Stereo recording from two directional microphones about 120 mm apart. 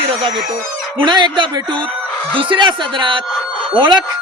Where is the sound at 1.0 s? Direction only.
40° right (ahead or behind).